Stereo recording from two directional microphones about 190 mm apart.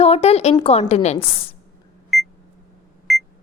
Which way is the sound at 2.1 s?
Centre (ahead or behind).